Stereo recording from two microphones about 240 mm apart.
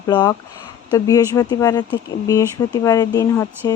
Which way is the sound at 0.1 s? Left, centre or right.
Centre.